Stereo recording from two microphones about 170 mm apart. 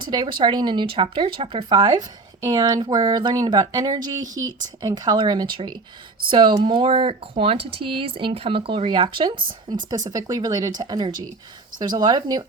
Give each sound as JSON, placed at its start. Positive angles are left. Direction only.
{"t": 0.0, "sound": "speech", "side_deg": -25}